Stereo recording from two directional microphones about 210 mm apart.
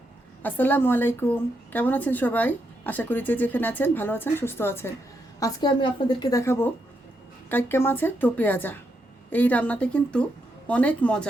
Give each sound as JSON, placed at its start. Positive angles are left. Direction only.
{"t": 0.4, "sound": "a woman's voice", "side_deg": 10}